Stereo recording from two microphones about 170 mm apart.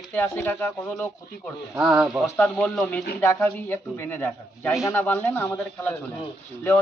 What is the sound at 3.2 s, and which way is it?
Speech, 15° left (ahead or behind).